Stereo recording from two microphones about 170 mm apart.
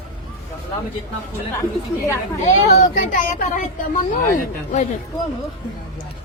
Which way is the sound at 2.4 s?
45° left (ahead or behind).